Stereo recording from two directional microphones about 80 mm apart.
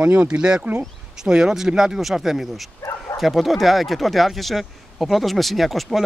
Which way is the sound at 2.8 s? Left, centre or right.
Left.